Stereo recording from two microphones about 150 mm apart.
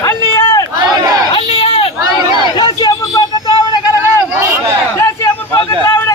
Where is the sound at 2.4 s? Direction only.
30° left (ahead or behind).